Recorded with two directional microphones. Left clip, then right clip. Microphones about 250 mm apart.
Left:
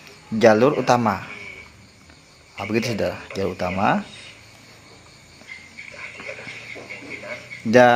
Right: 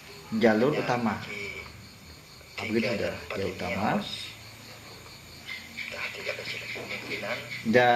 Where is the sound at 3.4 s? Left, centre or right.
Left.